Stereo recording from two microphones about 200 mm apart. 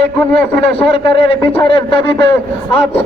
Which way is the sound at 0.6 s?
25° left (ahead or behind).